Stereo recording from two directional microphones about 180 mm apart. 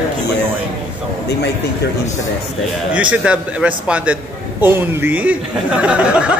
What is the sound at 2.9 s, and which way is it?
Speech, 5° right (ahead or behind).